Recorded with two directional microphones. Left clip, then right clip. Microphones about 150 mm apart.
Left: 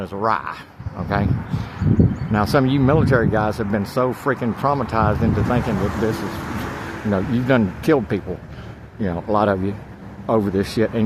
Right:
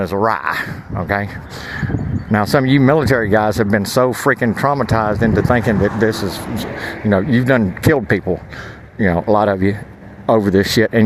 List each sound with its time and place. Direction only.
0.0 s speech: 45° right (ahead or behind)
2.3 s speech: 45° right (ahead or behind)